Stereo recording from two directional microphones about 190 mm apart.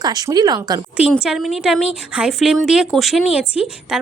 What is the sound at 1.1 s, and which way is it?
A woman's voice, centre (ahead or behind).